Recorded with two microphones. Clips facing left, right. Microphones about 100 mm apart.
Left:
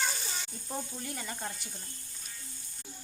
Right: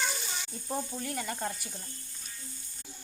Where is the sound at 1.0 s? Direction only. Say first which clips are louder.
Right 5 dB; 5° left (ahead or behind).